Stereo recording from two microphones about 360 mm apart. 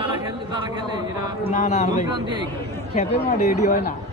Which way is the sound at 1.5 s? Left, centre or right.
Left.